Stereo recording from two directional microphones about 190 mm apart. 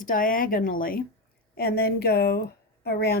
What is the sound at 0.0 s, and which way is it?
Speech, 45° left (ahead or behind).